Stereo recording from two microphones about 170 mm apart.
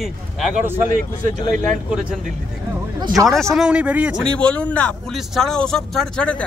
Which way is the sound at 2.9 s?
25° right (ahead or behind).